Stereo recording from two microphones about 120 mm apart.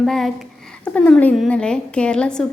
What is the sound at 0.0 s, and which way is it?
A woman's voice, 5° left (ahead or behind).